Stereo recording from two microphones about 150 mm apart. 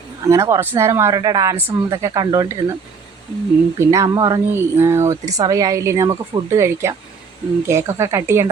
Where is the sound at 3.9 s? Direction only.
20° right (ahead or behind).